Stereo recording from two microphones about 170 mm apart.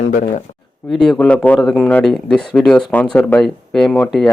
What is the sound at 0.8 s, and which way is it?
A man's voice, 5° left (ahead or behind).